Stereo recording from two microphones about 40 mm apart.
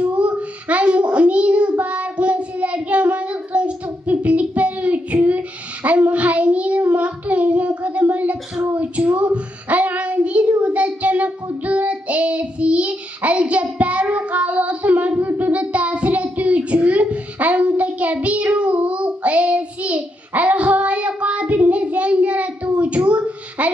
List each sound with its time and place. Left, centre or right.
0.0 s child singing: right
15.1 s child singing: right